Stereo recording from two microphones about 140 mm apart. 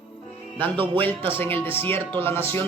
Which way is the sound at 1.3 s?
15° left (ahead or behind).